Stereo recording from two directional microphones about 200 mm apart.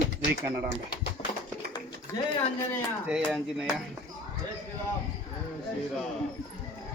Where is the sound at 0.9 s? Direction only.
50° left (ahead or behind).